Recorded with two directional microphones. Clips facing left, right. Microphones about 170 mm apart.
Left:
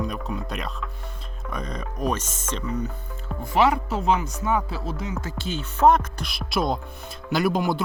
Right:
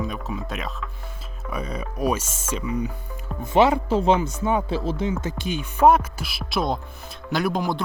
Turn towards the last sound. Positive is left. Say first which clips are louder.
# left 1 dB
turn(degrees=0)  # may be behind; listen again after turning